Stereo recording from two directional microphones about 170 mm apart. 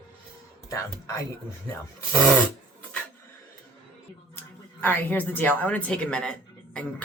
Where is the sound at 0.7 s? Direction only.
20° left (ahead or behind).